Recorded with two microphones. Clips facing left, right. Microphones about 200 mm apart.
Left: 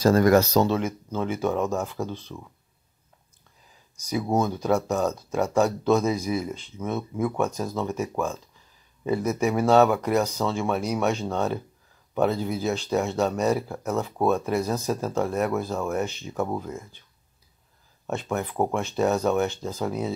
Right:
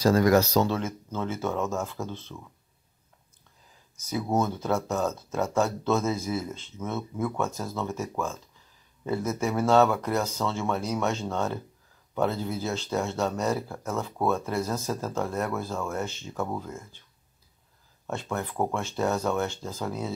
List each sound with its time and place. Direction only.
0.0 s speech: 50° left (ahead or behind)
0.7 s speech: 15° left (ahead or behind)
4.0 s speech: 15° left (ahead or behind)
18.0 s speech: 15° left (ahead or behind)